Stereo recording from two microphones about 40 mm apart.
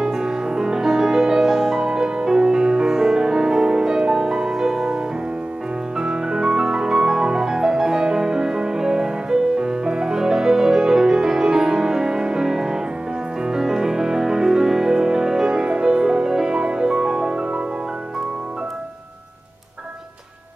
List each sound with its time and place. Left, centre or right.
0.0 s music: centre